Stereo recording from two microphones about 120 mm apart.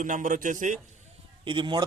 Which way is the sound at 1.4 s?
40° right (ahead or behind).